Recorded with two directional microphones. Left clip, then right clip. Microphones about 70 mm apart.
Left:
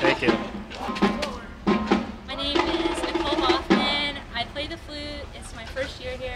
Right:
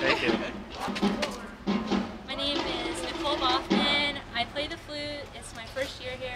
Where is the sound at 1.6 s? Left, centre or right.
Left.